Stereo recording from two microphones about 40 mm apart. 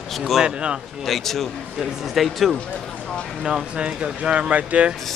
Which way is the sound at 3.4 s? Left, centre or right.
Centre.